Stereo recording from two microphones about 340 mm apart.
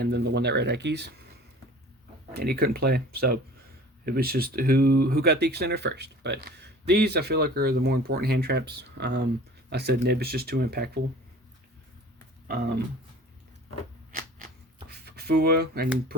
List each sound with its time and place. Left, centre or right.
0.0 s speech: right
2.3 s speech: right
14.2 s shuffling cards: right